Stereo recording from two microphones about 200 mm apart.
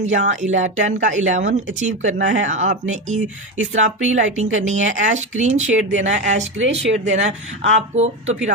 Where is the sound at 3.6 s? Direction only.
75° right (ahead or behind).